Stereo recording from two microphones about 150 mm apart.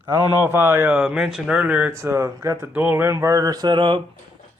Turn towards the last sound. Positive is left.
turn(degrees=-35)  # may be behind; listen again after turning